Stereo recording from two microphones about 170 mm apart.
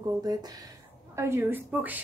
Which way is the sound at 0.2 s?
20° right (ahead or behind).